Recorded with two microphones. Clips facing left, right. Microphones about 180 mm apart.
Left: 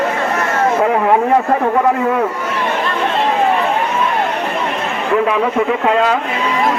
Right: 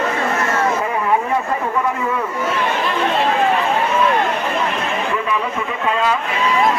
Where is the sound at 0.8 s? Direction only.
65° left (ahead or behind).